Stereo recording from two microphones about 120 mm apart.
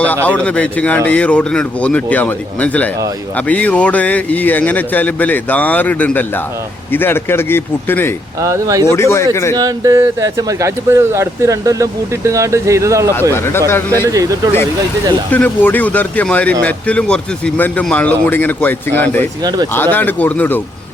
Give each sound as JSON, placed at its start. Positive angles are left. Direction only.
{"t": 0.3, "sound": "speech", "side_deg": 10}
{"t": 8.4, "sound": "speech", "side_deg": -25}
{"t": 8.8, "sound": "speech", "side_deg": 20}
{"t": 9.6, "sound": "speech", "side_deg": -30}
{"t": 13.3, "sound": "speech", "side_deg": 20}
{"t": 14.1, "sound": "speech", "side_deg": -30}
{"t": 15.3, "sound": "speech", "side_deg": 15}
{"t": 19.4, "sound": "speech", "side_deg": -35}
{"t": 19.7, "sound": "speech", "side_deg": 15}